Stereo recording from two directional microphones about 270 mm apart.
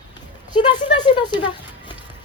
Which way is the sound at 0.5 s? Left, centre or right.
Centre.